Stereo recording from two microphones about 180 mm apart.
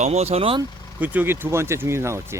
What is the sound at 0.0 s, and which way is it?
Speech, 35° right (ahead or behind).